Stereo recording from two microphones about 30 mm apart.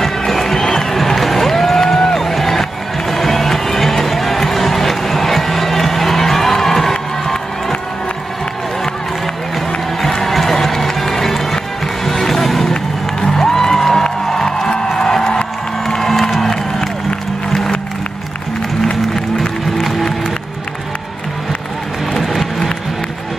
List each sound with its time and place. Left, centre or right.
0.0 s run: centre
2.0 s a sound: centre
3.1 s music: centre
10.0 s run: centre
13.2 s music: centre
15.0 s music: left
16.0 s music: centre
22.2 s a sound: centre